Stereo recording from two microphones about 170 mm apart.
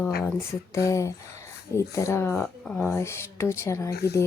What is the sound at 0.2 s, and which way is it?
Speech, 15° left (ahead or behind).